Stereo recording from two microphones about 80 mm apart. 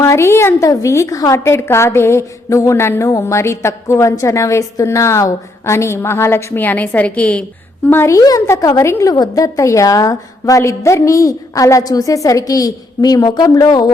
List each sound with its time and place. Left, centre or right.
0.0 s a woman's voice: left
0.6 s a woman's voice: left; by 7.4 s centre
7.9 s a woman's voice: left
8.1 s a woman's voice: left
9.1 s a woman's voice: left